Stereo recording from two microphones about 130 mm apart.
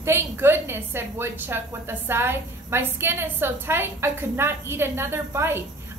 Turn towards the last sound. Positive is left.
turn(degrees=-20)  # may be behind; listen again after turning